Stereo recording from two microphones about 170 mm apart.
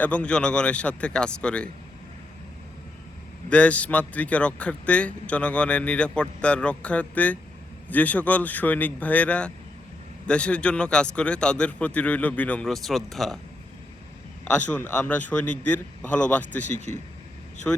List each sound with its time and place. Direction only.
0.0 s a man's voice: 5° left (ahead or behind)
3.5 s a man's voice: 10° left (ahead or behind)
14.4 s a man's voice: 10° left (ahead or behind)
16.7 s speech: 45° left (ahead or behind)
17.7 s a man's voice: 10° left (ahead or behind)